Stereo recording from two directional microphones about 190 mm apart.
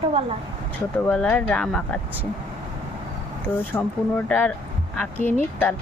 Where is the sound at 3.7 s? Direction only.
10° left (ahead or behind).